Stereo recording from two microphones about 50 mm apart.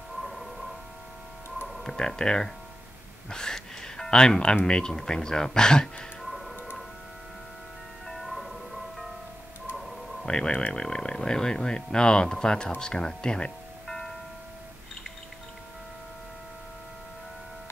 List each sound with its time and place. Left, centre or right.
0.2 s a sound: centre
1.7 s speech: centre
3.3 s music: centre
4.6 s speech: centre
6.2 s tick-tock: centre
8.1 s music: centre
10.2 s speech: centre
13.8 s music: centre